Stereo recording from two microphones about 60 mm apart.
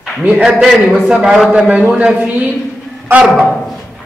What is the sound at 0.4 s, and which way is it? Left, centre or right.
A man's voice, centre.